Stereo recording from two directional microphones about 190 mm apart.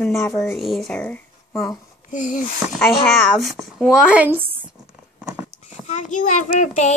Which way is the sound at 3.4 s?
Centre (ahead or behind).